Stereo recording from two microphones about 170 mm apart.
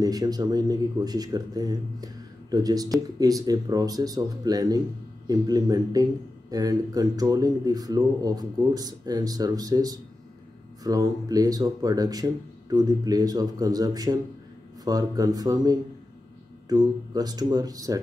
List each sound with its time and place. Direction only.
0.0 s speech: 25° right (ahead or behind)